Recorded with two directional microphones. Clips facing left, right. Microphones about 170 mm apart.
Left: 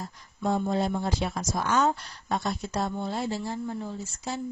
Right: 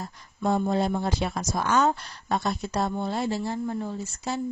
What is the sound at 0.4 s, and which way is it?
Speech, 65° right (ahead or behind).